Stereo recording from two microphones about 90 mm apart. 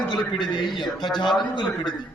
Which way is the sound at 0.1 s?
60° left (ahead or behind).